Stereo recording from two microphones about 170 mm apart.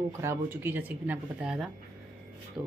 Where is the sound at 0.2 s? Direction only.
15° right (ahead or behind).